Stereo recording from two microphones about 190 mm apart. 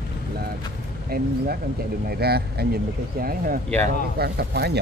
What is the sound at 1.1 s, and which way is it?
Speech, 55° right (ahead or behind).